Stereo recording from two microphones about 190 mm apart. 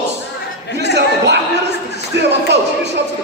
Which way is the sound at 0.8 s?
65° right (ahead or behind).